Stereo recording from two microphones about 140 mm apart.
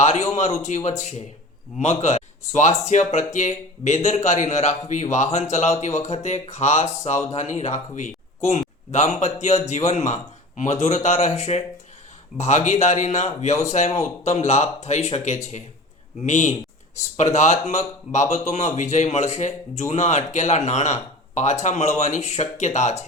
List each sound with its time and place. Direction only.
0.3 s speech: 55° left (ahead or behind)